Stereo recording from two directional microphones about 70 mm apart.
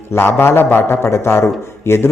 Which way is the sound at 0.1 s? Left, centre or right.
Left.